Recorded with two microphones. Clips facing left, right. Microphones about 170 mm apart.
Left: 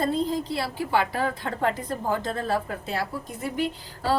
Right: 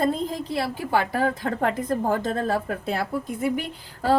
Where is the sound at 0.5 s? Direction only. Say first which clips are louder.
Right 1 dB; 45° right (ahead or behind).